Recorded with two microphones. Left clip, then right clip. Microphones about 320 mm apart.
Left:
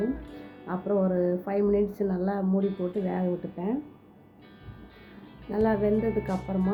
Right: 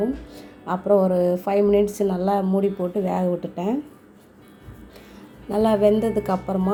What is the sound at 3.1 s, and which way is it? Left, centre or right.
Speech, centre.